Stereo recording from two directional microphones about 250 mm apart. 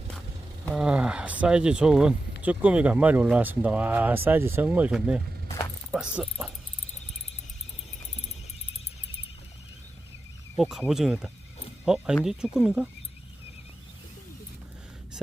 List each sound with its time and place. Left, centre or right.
0.6 s speech: centre
10.6 s speech: centre